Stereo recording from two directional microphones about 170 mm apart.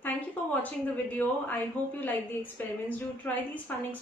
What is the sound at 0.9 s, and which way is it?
A woman's voice, 10° left (ahead or behind).